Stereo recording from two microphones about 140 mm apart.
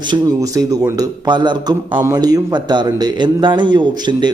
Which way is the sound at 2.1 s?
30° right (ahead or behind).